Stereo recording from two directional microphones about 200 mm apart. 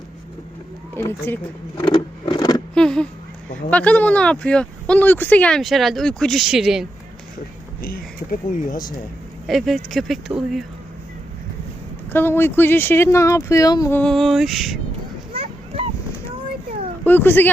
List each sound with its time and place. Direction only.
0.9 s speech: 10° left (ahead or behind)
1.8 s a sound: 25° left (ahead or behind)
2.7 s speech: 5° left (ahead or behind)
7.8 s speech: 45° left (ahead or behind)
9.5 s speech: centre (ahead or behind)
12.1 s speech: 10° left (ahead or behind)
14.0 s speech: centre (ahead or behind)
17.1 s speech: 10° left (ahead or behind)